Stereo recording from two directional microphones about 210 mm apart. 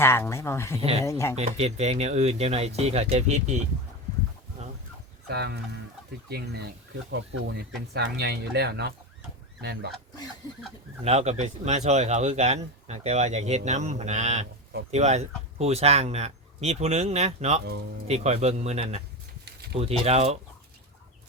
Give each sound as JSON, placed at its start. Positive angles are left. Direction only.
{"t": 0.0, "sound": "speech", "side_deg": 10}
{"t": 0.8, "sound": "speech", "side_deg": -30}
{"t": 1.0, "sound": "speech", "side_deg": 15}
{"t": 1.4, "sound": "speech", "side_deg": -30}
{"t": 5.3, "sound": "speech", "side_deg": -50}
{"t": 11.0, "sound": "speech", "side_deg": -30}